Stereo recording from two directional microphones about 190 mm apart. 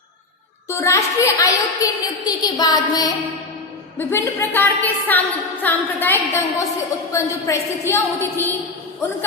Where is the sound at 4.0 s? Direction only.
10° left (ahead or behind).